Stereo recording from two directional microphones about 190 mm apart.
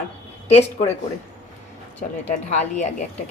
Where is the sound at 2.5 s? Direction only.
35° left (ahead or behind).